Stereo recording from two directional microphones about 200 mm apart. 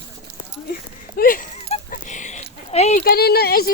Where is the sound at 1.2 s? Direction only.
45° left (ahead or behind).